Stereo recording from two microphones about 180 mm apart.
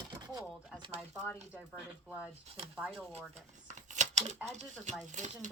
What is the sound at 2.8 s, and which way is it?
Speech, centre (ahead or behind).